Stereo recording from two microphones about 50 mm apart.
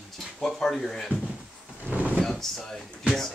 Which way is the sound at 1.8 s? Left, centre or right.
Right.